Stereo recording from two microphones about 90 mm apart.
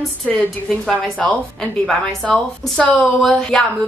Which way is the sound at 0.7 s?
5° left (ahead or behind).